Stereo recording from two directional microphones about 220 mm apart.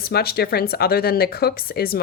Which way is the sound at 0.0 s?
45° left (ahead or behind).